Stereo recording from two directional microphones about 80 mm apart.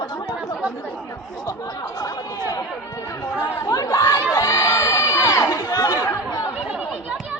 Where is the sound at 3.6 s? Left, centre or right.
Left.